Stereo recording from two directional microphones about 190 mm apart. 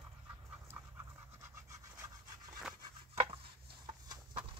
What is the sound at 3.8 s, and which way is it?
Horse, 25° right (ahead or behind).